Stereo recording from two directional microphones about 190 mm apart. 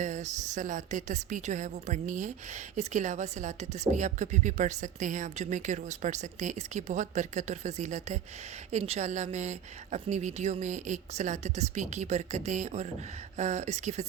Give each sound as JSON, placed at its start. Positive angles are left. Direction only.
{"t": 0.0, "sound": "a woman's voice", "side_deg": -40}